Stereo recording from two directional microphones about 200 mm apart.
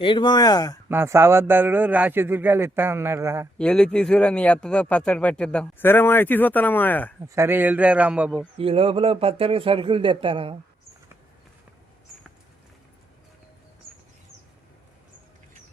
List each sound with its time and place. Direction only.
0.0 s speech: 25° left (ahead or behind)
0.9 s a man's voice: 10° right (ahead or behind)
3.6 s speech: 5° left (ahead or behind)
7.3 s a man's voice: 10° right (ahead or behind)
8.5 s a man's voice: 30° right (ahead or behind)